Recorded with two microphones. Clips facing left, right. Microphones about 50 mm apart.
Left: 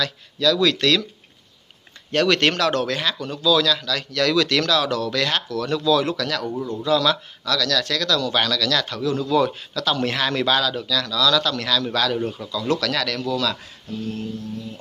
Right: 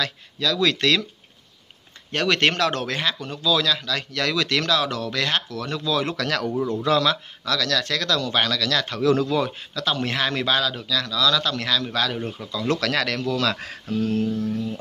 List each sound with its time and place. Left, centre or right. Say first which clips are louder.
0.0 s speech: left 4 dB; right
2.1 s speech: left 2 dB; centre
6.1 s speech: right 1 dB; right
7.0 s speech: left 1 dB; right
9.0 s speech: right 4 dB; right
9.3 s speech: left 4 dB; right
12.4 s speech: right 1 dB; right
13.6 s speech: right 6 dB; right